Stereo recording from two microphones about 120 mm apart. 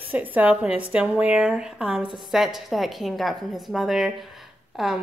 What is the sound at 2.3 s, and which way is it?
A woman's voice, centre (ahead or behind).